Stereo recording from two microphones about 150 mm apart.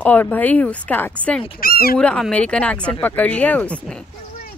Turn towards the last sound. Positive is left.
turn(degrees=5)  # may be behind; listen again after turning